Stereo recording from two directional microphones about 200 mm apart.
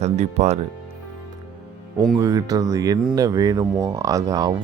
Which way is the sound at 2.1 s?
15° right (ahead or behind).